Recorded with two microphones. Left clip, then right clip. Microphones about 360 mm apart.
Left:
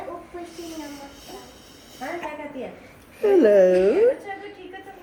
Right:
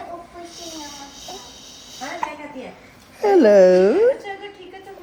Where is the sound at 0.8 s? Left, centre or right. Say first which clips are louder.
Right 2 dB; centre.